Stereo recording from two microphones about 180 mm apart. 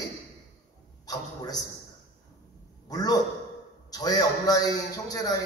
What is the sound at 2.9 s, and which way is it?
A man's voice, 20° left (ahead or behind).